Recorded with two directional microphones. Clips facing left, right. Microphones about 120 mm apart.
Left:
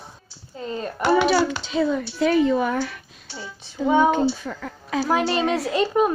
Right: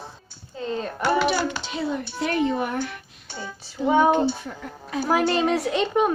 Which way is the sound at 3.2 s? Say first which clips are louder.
Right 1 dB; 50° right (ahead or behind).